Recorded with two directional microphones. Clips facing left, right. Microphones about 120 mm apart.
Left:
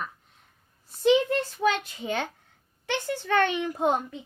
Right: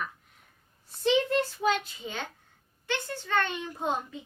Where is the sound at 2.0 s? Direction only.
80° left.